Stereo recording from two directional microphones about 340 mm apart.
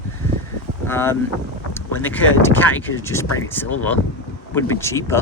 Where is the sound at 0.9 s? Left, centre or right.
Centre.